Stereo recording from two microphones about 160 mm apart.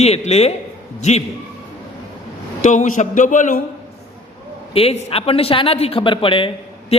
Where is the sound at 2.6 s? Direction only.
50° left (ahead or behind).